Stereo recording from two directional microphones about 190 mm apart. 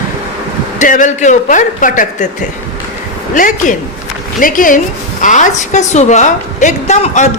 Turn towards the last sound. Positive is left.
turn(degrees=40)  # may be behind; listen again after turning